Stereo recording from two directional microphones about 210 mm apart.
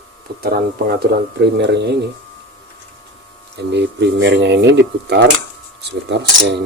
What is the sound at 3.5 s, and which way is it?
Speech, 55° right (ahead or behind).